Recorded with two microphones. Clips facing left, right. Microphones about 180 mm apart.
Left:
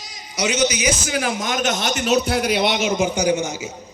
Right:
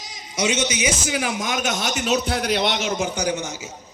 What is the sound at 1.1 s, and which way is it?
A man's voice, 15° right (ahead or behind).